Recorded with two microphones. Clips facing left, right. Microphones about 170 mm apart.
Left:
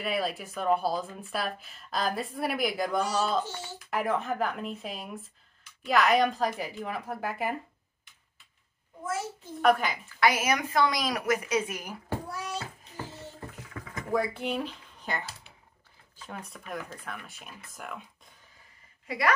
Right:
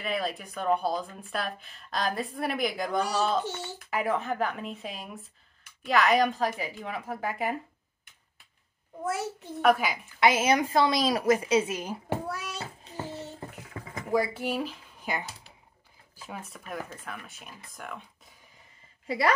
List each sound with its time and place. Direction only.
0.0 s a woman's voice: 5° left (ahead or behind)
9.0 s a child's voice: 65° right (ahead or behind)
9.6 s a woman's voice: 5° right (ahead or behind)
10.2 s a woman's voice: 25° right (ahead or behind)
13.7 s a sound: 30° right (ahead or behind)
14.1 s a woman's voice: 5° right (ahead or behind)
19.0 s a woman's voice: 30° right (ahead or behind)